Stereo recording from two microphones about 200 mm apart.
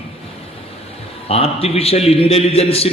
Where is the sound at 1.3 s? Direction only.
30° left (ahead or behind).